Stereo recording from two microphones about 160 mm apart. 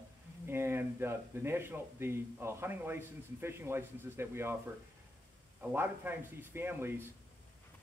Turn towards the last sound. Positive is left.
turn(degrees=-15)  # may be behind; listen again after turning